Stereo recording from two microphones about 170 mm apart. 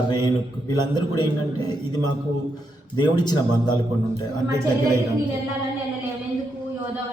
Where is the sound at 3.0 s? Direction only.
25° left (ahead or behind).